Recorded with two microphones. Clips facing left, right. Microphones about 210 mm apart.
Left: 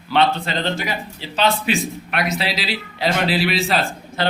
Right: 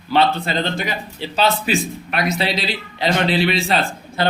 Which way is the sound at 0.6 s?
15° right (ahead or behind).